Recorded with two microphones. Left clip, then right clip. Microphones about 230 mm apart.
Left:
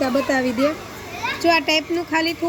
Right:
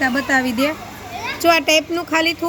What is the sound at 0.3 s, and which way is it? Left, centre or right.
Speech, right.